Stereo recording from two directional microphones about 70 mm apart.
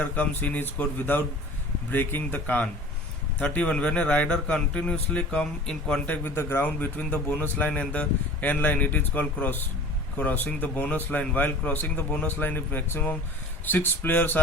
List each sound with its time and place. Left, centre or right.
0.0 s a man's voice: left
6.1 s a man's voice: left
6.7 s a man's voice: left